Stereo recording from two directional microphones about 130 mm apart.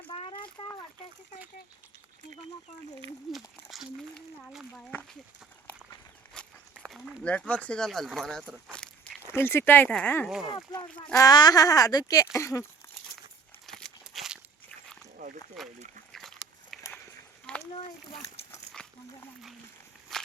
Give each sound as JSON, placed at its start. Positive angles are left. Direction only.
{"t": 0.1, "sound": "a sound", "side_deg": 45}
{"t": 3.3, "sound": "speech", "side_deg": 0}
{"t": 4.7, "sound": "speech", "side_deg": 15}
{"t": 6.4, "sound": "walk", "side_deg": 5}
{"t": 6.8, "sound": "speech", "side_deg": 0}
{"t": 8.7, "sound": "walk", "side_deg": 5}
{"t": 9.3, "sound": "speech", "side_deg": 20}
{"t": 10.2, "sound": "speech", "side_deg": 0}
{"t": 10.5, "sound": "speech", "side_deg": 30}
{"t": 13.7, "sound": "a sound", "side_deg": 5}
{"t": 15.6, "sound": "speech", "side_deg": 0}
{"t": 16.1, "sound": "a sound", "side_deg": 0}
{"t": 18.8, "sound": "dog", "side_deg": 5}